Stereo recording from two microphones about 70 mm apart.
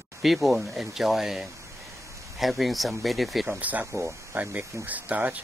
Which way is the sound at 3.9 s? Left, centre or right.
Right.